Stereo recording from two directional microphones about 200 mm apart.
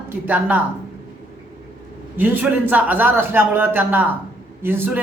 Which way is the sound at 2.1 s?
10° right (ahead or behind).